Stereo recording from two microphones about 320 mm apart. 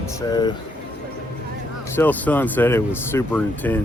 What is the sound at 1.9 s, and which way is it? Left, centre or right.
Speech, centre.